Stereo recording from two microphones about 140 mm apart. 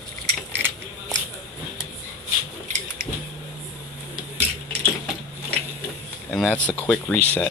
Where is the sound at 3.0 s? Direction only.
90° right.